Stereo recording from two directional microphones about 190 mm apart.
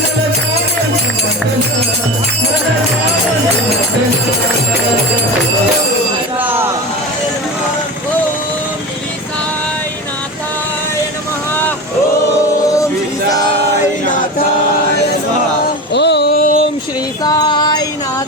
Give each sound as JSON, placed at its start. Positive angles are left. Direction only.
{"t": 6.4, "sound": "vehicle", "side_deg": -10}
{"t": 15.9, "sound": "a sound", "side_deg": 65}
{"t": 17.2, "sound": "music", "side_deg": 20}